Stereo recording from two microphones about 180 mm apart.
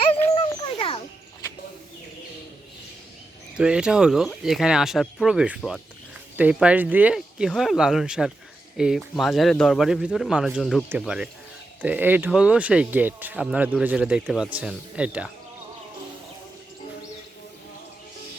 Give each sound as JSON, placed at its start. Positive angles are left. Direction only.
{"t": 0.3, "sound": "dog", "side_deg": 30}
{"t": 3.6, "sound": "speech", "side_deg": -5}